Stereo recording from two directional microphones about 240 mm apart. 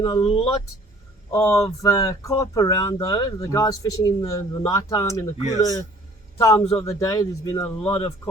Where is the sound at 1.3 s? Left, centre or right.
Centre.